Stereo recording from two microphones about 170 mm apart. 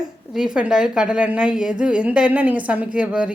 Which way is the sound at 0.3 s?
5° right (ahead or behind).